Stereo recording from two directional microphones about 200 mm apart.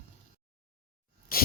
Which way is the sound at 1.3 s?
45° left (ahead or behind).